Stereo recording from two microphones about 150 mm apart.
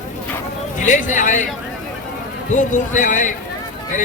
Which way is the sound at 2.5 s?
55° left (ahead or behind).